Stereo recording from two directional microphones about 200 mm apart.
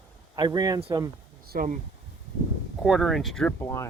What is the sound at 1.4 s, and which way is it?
Speech, 50° right (ahead or behind).